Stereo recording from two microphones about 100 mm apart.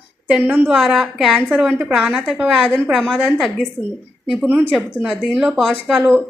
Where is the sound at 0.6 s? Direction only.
5° right (ahead or behind).